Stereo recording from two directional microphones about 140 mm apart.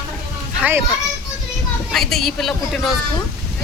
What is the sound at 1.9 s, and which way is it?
Speech, centre (ahead or behind).